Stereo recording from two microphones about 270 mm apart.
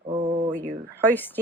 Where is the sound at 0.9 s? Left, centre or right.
Centre.